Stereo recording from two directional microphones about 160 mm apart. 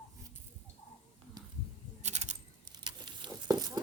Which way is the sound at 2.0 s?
45° right (ahead or behind).